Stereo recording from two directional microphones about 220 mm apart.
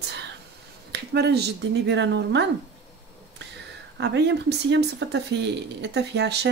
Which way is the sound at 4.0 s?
50° right (ahead or behind).